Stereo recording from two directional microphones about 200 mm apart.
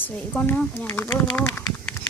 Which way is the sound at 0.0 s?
10° left (ahead or behind).